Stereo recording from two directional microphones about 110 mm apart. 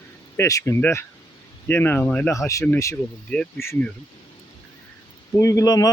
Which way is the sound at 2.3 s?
30° left (ahead or behind).